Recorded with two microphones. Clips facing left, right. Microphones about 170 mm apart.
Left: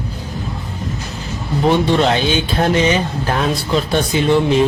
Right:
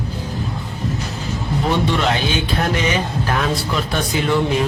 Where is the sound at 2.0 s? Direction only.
30° left (ahead or behind).